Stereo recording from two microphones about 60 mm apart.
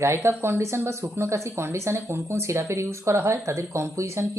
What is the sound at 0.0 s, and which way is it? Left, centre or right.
Speech, right.